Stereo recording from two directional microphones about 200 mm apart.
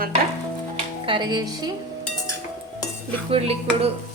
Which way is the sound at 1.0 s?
25° right (ahead or behind).